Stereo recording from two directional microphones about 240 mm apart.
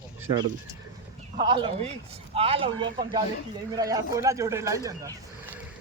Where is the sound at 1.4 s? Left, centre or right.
Right.